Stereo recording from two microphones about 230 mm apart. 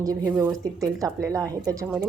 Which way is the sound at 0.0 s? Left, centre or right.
Centre.